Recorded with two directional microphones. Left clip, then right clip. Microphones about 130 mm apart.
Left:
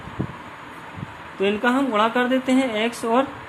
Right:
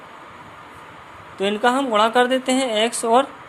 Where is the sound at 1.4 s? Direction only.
50° right (ahead or behind).